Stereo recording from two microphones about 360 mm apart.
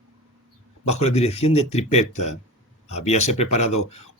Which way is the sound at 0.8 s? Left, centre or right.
Centre.